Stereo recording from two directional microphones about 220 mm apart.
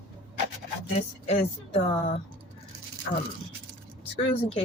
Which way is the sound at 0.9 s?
30° left (ahead or behind).